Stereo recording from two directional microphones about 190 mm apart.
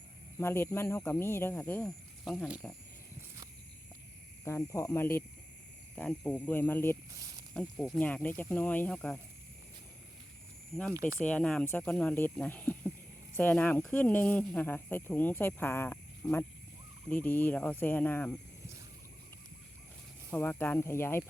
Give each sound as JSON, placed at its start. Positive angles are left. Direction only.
{"t": 0.3, "sound": "speech", "side_deg": 10}
{"t": 4.4, "sound": "speech", "side_deg": 15}
{"t": 7.1, "sound": "speech", "side_deg": -20}
{"t": 7.5, "sound": "speech", "side_deg": 5}
{"t": 11.2, "sound": "speech", "side_deg": 5}
{"t": 20.3, "sound": "speech", "side_deg": 10}